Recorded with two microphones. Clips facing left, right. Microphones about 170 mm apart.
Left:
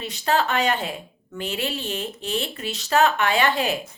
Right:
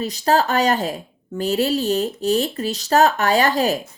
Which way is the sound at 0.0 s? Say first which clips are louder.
Right 4 dB; 40° right (ahead or behind).